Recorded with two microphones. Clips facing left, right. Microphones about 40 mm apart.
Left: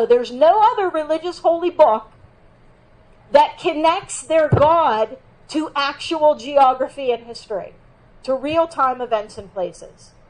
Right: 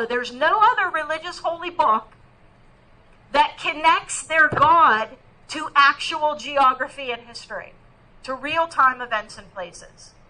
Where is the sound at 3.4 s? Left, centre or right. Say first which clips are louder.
Left 5 dB; right.